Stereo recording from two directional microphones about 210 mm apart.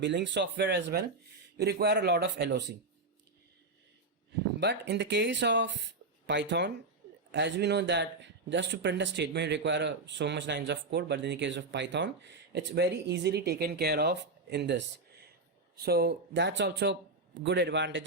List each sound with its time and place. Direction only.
0.0 s a man's voice: 55° right (ahead or behind)
4.6 s speech: 55° right (ahead or behind)